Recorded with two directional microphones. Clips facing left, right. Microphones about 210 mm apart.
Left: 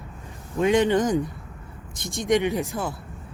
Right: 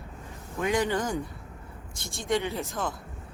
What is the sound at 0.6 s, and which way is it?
Speech, 20° left (ahead or behind).